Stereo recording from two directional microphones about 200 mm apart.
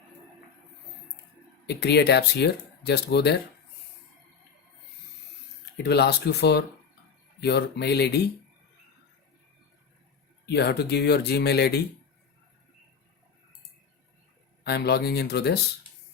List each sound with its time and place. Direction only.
1.6 s speech: 55° left (ahead or behind)
5.7 s speech: 55° left (ahead or behind)
10.4 s speech: 55° left (ahead or behind)
14.6 s speech: 55° left (ahead or behind)